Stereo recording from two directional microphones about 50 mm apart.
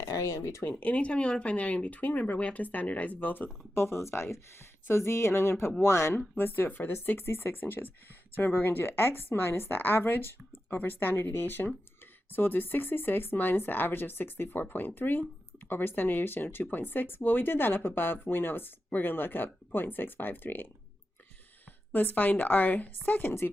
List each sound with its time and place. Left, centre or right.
0.0 s speech: left
0.8 s speech: left
3.8 s speech: left
6.3 s speech: left
21.9 s speech: left